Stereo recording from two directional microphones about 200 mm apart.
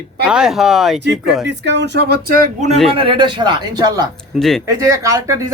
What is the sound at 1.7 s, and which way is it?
Speech, 60° right (ahead or behind).